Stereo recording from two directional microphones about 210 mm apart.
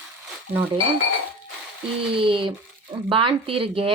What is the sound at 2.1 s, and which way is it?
Speech, 25° right (ahead or behind).